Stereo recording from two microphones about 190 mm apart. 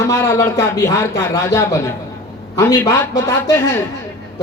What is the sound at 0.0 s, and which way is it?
A woman's voice, 15° left (ahead or behind).